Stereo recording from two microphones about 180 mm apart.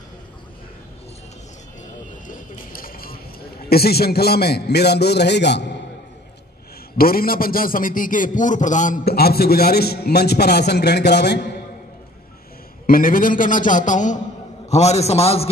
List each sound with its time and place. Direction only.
2.2 s a sound: 50° left (ahead or behind)
3.6 s a man's voice: 60° left (ahead or behind)
7.0 s a man's voice: 55° left (ahead or behind)
12.8 s a man's voice: 50° left (ahead or behind); by 15.5 s 35° left (ahead or behind)